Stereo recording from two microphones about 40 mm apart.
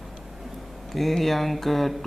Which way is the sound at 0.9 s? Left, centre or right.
Centre.